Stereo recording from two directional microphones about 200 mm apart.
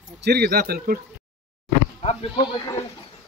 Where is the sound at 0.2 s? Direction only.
50° right (ahead or behind).